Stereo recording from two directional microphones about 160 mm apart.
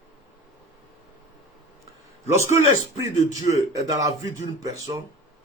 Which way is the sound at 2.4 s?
20° right (ahead or behind).